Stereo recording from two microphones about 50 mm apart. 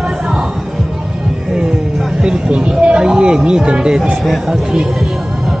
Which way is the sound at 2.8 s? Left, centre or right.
Centre.